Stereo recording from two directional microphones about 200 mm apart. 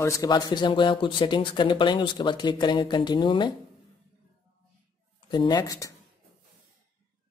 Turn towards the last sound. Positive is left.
turn(degrees=15)  # may be behind; listen again after turning